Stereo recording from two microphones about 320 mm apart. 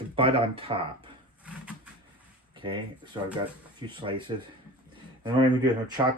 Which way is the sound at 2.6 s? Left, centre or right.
Centre.